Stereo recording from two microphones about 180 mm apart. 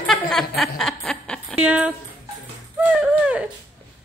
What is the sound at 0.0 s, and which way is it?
Chuckle, 5° left (ahead or behind).